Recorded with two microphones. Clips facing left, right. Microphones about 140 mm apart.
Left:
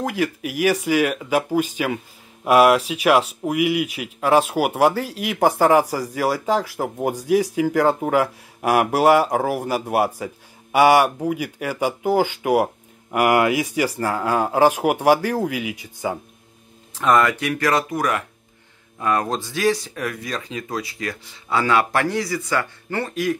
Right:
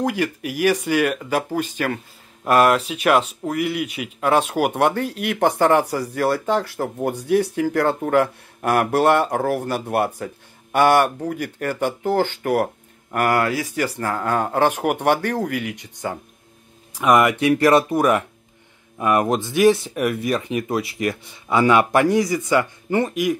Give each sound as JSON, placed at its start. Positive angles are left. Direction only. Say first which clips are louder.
{"t": 0.0, "sound": "speech", "louder": "right 1 dB", "side_deg": 0}
{"t": 16.9, "sound": "speech", "louder": "right 1 dB", "side_deg": -15}